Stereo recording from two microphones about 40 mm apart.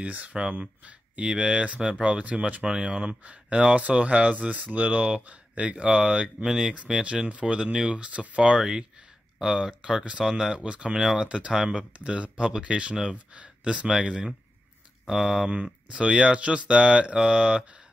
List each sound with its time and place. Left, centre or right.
0.0 s speech: right
1.2 s speech: right
2.6 s speech: right
6.4 s speech: centre
6.7 s speech: right
8.4 s speech: right
11.0 s speech: centre
11.2 s speech: right
11.5 s speech: centre
12.0 s speech: right
13.3 s speech: right
13.8 s speech: centre
15.9 s speech: right